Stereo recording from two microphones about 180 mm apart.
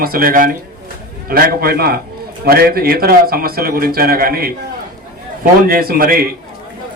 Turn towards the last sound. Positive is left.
turn(degrees=-55)  # may be behind; listen again after turning